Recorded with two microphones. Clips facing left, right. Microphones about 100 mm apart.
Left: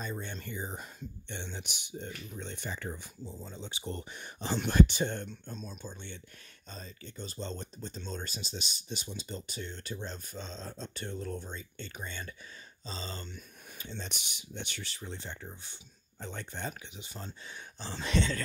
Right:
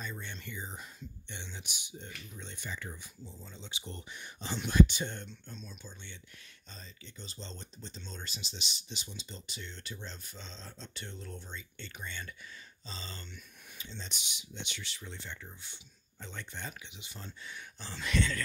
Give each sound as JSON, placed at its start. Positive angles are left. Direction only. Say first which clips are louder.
{"t": 0.0, "sound": "speech", "louder": "left 4 dB", "side_deg": 40}
{"t": 13.7, "sound": "speech", "louder": "left 4 dB", "side_deg": 55}